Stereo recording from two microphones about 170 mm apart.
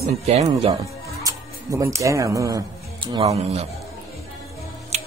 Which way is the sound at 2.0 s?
20° right (ahead or behind).